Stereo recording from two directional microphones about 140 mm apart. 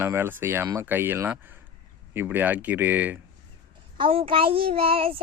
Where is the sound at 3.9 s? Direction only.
40° right (ahead or behind).